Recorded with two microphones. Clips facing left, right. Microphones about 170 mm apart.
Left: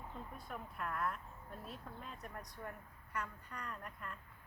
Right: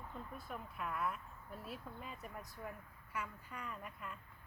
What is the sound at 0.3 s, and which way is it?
A woman's voice, centre (ahead or behind).